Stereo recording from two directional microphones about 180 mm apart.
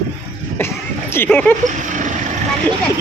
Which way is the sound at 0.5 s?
15° left (ahead or behind).